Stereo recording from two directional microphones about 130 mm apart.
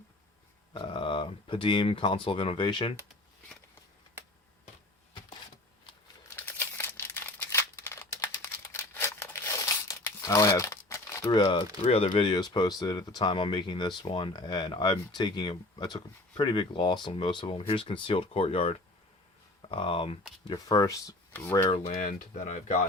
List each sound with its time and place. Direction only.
0.7 s speech: 40° left (ahead or behind)
6.3 s crumpling: 15° left (ahead or behind)
11.3 s speech: 35° left (ahead or behind)
20.5 s speech: 30° left (ahead or behind)
21.8 s speech: 65° left (ahead or behind)